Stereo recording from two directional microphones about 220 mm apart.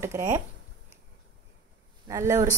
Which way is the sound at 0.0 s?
10° right (ahead or behind).